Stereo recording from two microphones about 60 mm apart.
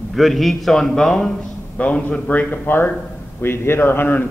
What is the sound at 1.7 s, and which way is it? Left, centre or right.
A man's voice, left.